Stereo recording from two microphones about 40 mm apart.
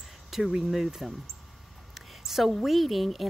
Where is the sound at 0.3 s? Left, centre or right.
Centre.